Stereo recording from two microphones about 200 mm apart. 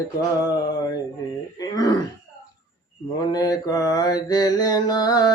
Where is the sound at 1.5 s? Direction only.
15° left (ahead or behind).